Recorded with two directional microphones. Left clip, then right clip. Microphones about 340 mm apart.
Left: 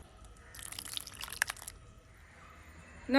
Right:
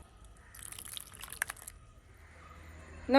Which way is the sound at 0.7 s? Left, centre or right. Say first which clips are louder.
Left 5 dB; centre.